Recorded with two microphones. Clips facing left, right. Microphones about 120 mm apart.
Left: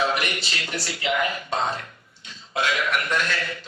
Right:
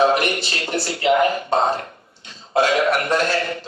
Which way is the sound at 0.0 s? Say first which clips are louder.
Right 8 dB; 35° right (ahead or behind).